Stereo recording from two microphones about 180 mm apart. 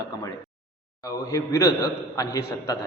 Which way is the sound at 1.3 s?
20° left (ahead or behind).